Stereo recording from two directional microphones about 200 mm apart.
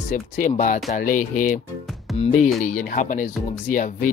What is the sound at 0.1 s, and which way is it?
Speech, 40° left (ahead or behind).